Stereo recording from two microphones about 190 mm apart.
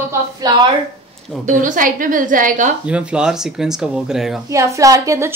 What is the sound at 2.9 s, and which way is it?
Speech, 5° right (ahead or behind).